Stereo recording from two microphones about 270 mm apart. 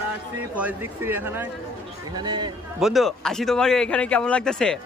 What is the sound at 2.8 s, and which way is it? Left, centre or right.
A man's voice, centre.